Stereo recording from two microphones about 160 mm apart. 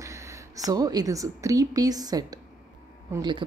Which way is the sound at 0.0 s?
20° right (ahead or behind).